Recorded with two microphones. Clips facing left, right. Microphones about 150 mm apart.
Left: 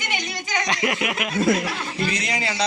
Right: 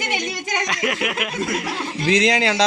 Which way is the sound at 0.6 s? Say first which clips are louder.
Left 1 dB; centre (ahead or behind).